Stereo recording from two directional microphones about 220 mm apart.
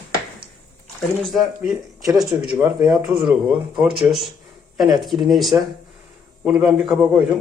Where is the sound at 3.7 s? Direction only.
Centre (ahead or behind).